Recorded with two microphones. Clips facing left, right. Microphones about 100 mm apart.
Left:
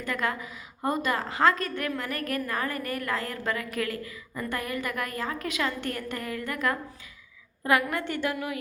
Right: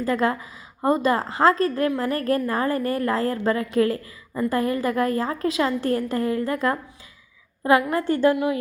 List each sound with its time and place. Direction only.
0.0 s a woman's voice: 30° right (ahead or behind)